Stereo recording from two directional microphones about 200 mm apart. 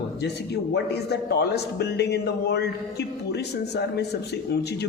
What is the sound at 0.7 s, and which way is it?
A man's voice, 55° left (ahead or behind).